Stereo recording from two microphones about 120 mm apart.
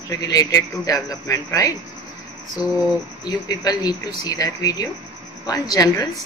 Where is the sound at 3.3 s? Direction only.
35° left (ahead or behind).